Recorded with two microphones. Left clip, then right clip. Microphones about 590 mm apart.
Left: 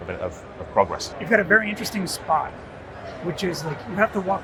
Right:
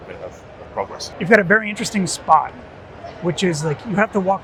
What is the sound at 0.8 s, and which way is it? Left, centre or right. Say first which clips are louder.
Speech: left 6 dB; left.